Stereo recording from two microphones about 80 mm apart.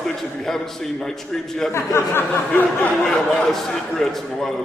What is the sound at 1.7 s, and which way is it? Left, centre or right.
Speech, left.